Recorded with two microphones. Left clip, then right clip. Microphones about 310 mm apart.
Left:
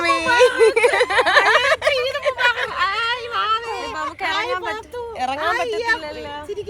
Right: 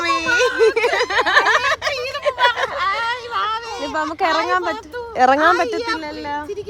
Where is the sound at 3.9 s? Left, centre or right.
Right.